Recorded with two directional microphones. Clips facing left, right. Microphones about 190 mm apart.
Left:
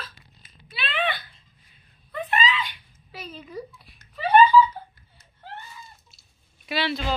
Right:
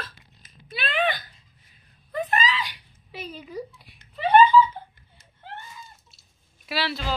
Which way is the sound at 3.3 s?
5° right (ahead or behind).